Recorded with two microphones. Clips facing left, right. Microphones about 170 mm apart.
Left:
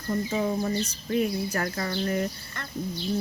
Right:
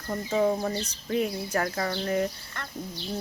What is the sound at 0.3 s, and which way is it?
Speech, 5° left (ahead or behind).